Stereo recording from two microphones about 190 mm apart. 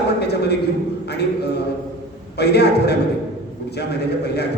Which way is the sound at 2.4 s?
60° left (ahead or behind).